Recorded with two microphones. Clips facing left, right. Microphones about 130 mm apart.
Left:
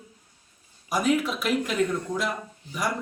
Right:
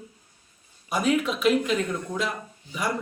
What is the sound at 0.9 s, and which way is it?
Speech, 5° left (ahead or behind).